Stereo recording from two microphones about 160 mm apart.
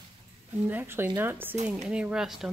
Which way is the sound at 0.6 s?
15° right (ahead or behind).